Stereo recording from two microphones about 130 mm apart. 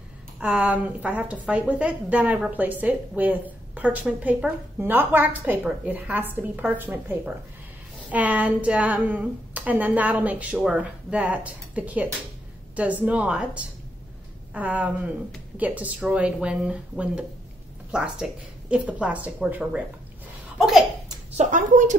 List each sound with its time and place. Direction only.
0.4 s a woman's voice: 10° right (ahead or behind)
21.4 s speech: 85° right